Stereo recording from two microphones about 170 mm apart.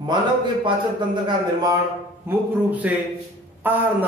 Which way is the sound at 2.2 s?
10° right (ahead or behind).